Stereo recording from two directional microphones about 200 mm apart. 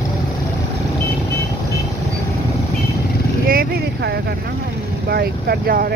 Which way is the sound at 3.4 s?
50° right (ahead or behind).